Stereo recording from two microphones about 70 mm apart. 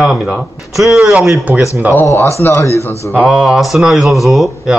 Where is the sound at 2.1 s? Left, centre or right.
Left.